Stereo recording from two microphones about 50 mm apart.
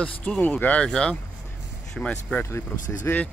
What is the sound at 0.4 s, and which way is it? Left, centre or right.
Speech, left.